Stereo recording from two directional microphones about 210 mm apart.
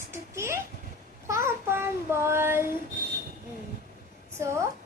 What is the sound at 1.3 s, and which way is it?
Child singing, 10° right (ahead or behind).